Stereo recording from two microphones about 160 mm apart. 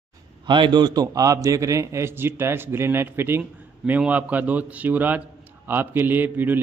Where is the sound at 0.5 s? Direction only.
30° right (ahead or behind).